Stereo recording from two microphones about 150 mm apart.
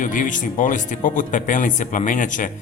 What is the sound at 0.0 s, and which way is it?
Speech, 60° left (ahead or behind).